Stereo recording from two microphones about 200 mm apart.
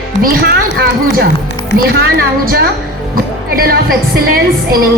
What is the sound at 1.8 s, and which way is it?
Speech, 50° right (ahead or behind).